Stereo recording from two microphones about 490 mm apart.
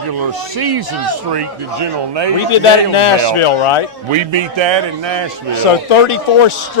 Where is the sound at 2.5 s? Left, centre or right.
Left.